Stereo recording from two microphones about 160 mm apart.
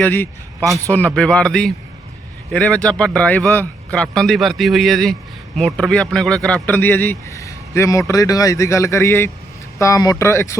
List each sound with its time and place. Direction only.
0.0 s a man's voice: 15° left (ahead or behind)